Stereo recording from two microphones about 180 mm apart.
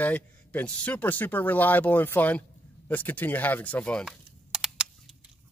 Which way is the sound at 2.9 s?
10° left (ahead or behind).